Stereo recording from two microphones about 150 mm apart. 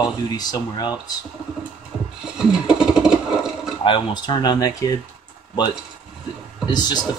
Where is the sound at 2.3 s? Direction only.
5° right (ahead or behind).